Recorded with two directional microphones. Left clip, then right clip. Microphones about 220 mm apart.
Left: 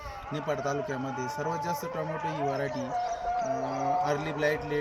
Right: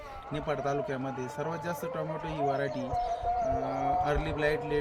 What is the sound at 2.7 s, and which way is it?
Speech, 55° right (ahead or behind).